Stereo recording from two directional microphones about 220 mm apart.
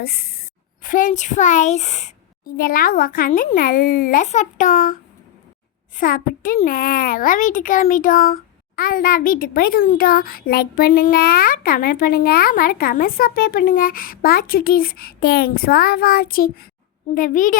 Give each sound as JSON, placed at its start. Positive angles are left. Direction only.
{"t": 0.0, "sound": "a child's voice", "side_deg": 45}
{"t": 6.0, "sound": "a child's voice", "side_deg": 40}